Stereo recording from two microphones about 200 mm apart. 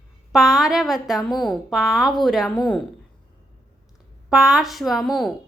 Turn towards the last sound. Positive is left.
turn(degrees=0)  # may be behind; listen again after turning